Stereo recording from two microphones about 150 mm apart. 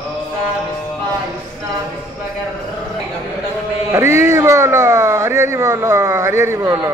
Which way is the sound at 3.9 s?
20° right (ahead or behind).